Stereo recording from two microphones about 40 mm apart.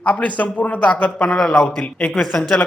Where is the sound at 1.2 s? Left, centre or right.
Centre.